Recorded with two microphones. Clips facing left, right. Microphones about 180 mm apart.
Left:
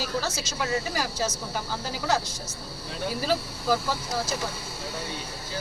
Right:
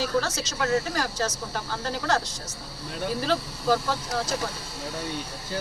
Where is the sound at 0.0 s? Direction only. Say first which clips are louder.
Right 4 dB; 5° left (ahead or behind).